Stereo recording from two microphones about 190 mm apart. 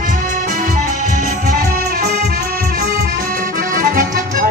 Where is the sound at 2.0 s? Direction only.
60° right (ahead or behind).